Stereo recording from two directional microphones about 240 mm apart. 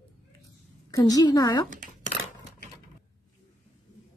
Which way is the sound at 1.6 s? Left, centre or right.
Right.